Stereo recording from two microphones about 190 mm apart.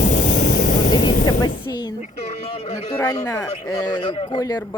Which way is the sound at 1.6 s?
20° left (ahead or behind).